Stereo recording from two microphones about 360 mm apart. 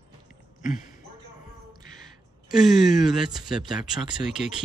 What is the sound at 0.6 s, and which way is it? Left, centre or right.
Speech, left.